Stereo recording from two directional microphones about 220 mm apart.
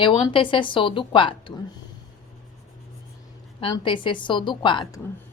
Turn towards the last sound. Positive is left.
turn(degrees=20)  # may be behind; listen again after turning